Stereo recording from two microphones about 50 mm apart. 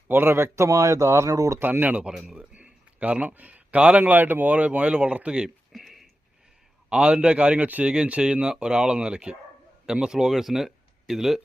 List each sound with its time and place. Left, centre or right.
0.1 s speech: right
1.8 s speech: right
5.7 s a sound: centre
6.9 s speech: centre